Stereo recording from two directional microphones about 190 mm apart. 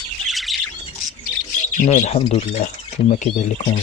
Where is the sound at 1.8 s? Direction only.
40° left (ahead or behind).